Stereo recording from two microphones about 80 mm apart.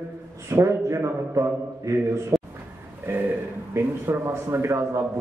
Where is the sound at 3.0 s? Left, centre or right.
Right.